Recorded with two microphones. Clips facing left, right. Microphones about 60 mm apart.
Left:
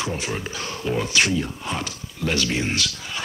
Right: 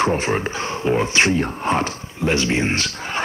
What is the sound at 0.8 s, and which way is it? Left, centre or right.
Speech, right.